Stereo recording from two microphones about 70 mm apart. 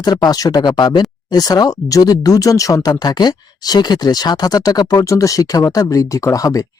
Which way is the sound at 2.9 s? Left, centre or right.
Left.